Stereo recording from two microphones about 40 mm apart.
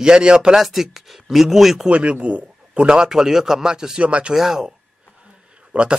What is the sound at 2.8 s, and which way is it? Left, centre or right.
A man's voice, centre.